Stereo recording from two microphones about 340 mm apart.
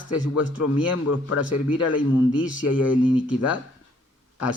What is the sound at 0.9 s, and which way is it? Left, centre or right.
Speech, left.